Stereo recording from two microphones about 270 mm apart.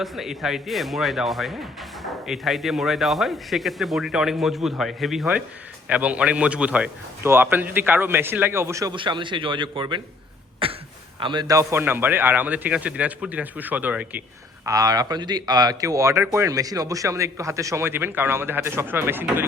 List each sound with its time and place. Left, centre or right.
0.0 s speech: centre
10.6 s throat clearing: centre
11.2 s speech: centre